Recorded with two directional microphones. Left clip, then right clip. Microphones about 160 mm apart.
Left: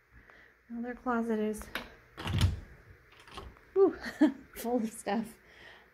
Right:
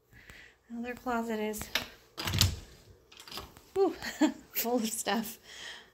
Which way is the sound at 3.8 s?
35° left (ahead or behind).